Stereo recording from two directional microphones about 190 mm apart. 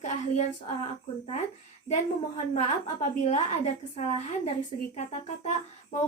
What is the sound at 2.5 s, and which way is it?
A woman's voice, 35° left (ahead or behind).